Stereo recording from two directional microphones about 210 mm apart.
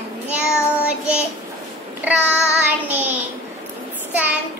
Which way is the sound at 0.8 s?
5° right (ahead or behind).